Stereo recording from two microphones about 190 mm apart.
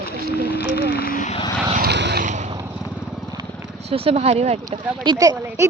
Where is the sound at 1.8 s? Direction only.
60° right (ahead or behind).